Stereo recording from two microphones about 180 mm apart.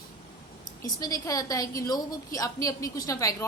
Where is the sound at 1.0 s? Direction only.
20° left (ahead or behind).